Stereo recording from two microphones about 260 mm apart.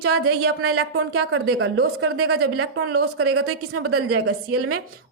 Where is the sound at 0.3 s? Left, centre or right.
Right.